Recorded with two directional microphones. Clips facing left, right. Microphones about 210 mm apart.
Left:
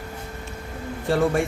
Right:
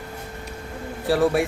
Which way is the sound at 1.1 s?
5° right (ahead or behind).